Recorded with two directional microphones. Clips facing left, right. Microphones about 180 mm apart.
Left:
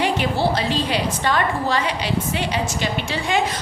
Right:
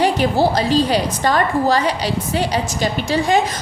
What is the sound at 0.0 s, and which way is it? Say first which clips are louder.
A woman's voice: right 5 dB; 40° right (ahead or behind).